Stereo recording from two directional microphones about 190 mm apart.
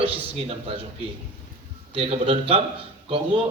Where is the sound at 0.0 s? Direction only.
30° right (ahead or behind).